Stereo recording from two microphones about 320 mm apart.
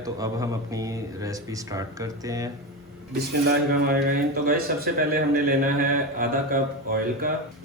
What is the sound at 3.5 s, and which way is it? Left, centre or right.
A man's voice, right.